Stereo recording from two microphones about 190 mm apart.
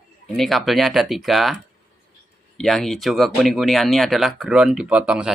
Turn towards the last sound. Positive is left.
turn(degrees=-5)  # may be behind; listen again after turning